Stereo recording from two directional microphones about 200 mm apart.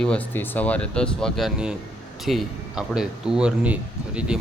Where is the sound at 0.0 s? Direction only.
5° left (ahead or behind).